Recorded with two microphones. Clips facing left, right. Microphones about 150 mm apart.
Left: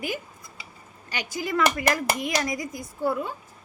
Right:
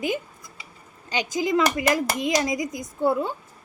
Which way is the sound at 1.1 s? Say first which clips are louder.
Right 5 dB; 20° right (ahead or behind).